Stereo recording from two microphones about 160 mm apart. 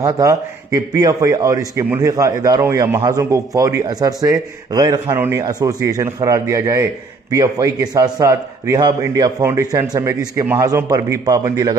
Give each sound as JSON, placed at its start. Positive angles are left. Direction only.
{"t": 0.0, "sound": "a man's voice", "side_deg": -20}